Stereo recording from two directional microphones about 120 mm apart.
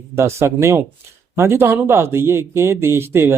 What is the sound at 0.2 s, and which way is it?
A man's voice, 20° right (ahead or behind).